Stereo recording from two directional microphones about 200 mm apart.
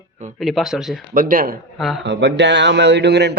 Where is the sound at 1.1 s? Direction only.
45° right (ahead or behind).